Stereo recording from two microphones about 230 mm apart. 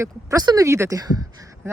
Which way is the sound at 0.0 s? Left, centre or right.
Centre.